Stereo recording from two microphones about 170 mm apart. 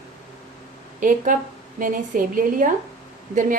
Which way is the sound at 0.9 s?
50° right (ahead or behind).